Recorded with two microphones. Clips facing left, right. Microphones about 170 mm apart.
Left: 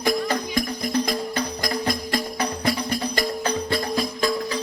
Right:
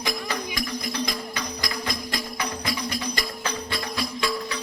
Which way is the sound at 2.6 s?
55° left (ahead or behind).